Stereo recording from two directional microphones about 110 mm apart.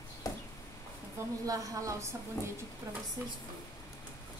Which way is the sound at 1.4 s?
30° right (ahead or behind).